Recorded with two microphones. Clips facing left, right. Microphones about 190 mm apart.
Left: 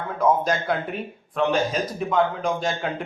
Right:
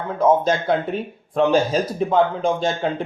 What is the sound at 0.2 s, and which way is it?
Speech, 25° right (ahead or behind).